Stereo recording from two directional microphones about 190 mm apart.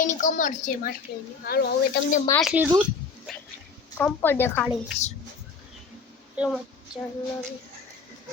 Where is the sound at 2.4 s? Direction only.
5° right (ahead or behind).